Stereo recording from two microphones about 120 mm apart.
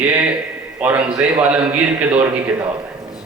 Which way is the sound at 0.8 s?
10° right (ahead or behind).